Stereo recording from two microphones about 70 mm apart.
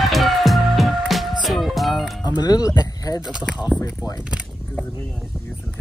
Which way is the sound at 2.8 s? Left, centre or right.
Left.